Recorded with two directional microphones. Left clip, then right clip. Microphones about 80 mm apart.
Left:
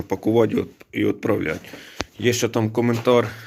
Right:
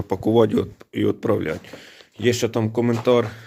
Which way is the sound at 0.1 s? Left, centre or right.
Right.